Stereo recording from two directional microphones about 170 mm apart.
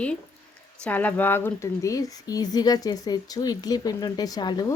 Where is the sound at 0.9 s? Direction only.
10° left (ahead or behind).